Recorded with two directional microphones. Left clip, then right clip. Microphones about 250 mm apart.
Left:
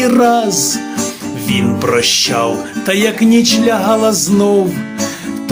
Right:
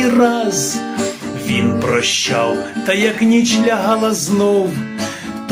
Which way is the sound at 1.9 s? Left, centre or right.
Left.